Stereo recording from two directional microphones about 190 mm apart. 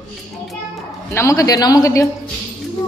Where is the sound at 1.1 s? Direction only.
15° left (ahead or behind).